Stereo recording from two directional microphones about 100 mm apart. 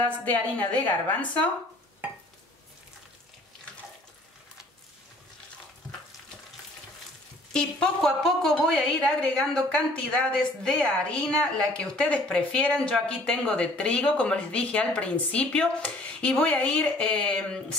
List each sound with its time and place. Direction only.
0.0 s a woman's voice: 15° left (ahead or behind)
7.5 s a woman's voice: 5° left (ahead or behind)